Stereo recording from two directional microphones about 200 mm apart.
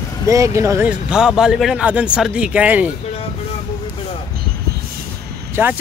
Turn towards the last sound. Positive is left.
turn(degrees=-10)  # may be behind; listen again after turning